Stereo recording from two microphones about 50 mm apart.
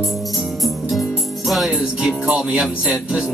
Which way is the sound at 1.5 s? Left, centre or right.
Centre.